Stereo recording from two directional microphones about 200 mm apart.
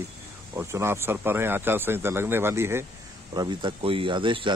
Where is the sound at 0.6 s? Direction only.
15° right (ahead or behind).